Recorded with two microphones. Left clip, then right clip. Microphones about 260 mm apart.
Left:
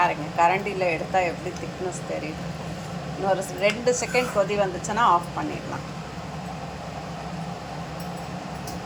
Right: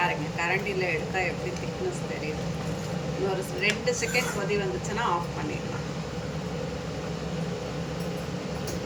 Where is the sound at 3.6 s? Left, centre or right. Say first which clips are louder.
Left 1 dB; centre.